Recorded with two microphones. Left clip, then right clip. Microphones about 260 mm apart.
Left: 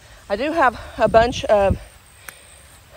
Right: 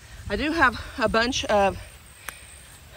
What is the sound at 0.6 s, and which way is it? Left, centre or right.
Speech, centre.